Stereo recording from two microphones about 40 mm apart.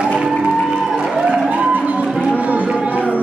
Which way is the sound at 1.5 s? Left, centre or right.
Right.